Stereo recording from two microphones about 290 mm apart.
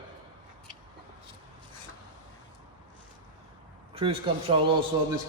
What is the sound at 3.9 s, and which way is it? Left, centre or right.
A man's voice, centre.